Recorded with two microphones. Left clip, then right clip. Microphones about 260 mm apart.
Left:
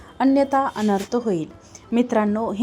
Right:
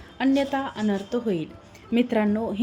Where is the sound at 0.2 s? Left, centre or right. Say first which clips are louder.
Left 6 dB; centre.